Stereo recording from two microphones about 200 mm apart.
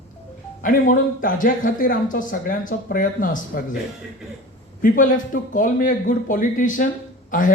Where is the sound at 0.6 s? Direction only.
45° left (ahead or behind).